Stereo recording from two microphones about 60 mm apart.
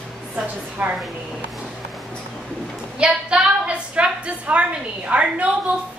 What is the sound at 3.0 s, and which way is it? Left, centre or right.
A woman's voice, centre.